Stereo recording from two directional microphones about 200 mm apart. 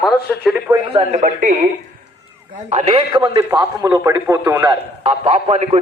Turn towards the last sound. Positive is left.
turn(degrees=-30)  # may be behind; listen again after turning